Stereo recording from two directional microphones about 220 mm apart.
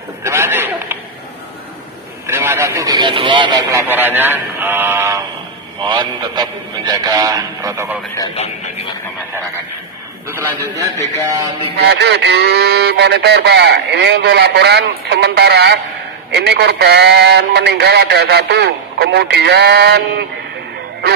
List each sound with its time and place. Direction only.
0.2 s a sound: 10° right (ahead or behind)
2.2 s speech: 10° right (ahead or behind)
8.4 s speech: 30° left (ahead or behind)
11.8 s speech: 50° right (ahead or behind)